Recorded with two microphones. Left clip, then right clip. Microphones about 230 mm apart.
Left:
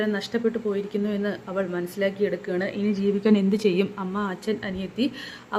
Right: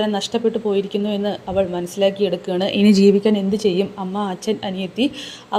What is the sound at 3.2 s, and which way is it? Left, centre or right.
A woman's voice, centre.